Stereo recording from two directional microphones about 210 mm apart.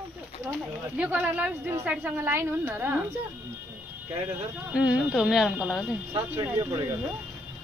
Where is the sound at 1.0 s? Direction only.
5° right (ahead or behind).